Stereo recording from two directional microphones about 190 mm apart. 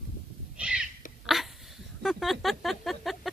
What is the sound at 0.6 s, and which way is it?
Owl, 5° right (ahead or behind).